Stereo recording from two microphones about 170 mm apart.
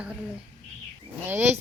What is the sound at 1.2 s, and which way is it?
Speech, 10° right (ahead or behind).